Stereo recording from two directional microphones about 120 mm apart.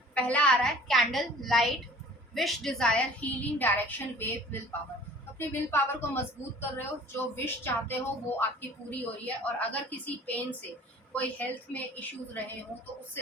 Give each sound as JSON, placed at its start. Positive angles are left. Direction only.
{"t": 0.1, "sound": "a woman's voice", "side_deg": 10}
{"t": 5.4, "sound": "a woman's voice", "side_deg": 20}